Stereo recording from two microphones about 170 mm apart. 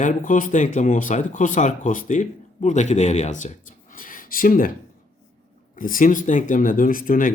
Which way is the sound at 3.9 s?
55° left (ahead or behind).